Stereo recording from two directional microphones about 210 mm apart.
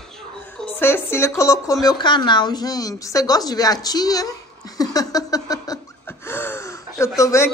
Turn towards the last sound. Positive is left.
turn(degrees=15)  # may be behind; listen again after turning